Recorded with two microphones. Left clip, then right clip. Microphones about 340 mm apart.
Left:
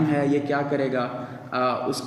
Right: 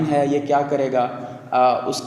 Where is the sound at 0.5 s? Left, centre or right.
Right.